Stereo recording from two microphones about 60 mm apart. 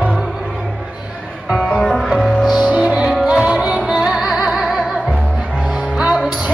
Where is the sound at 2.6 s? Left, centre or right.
Centre.